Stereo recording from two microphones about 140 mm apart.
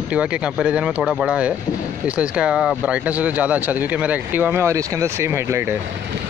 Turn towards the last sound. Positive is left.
turn(degrees=-20)  # may be behind; listen again after turning